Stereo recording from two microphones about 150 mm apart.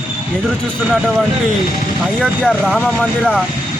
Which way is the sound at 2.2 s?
Centre (ahead or behind).